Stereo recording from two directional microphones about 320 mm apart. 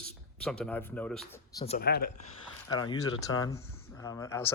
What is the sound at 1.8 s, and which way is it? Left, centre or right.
Speech, left.